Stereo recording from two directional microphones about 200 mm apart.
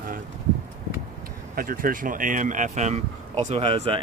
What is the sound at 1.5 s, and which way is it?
Speech, 45° right (ahead or behind).